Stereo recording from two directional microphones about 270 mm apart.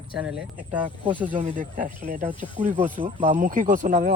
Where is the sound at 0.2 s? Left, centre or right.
Centre.